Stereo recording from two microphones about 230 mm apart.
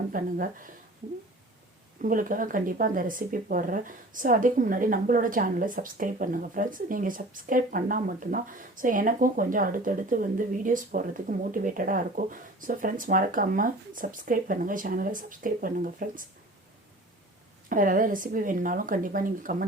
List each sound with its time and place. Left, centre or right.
0.1 s speech: right
2.0 s speech: right
17.7 s speech: right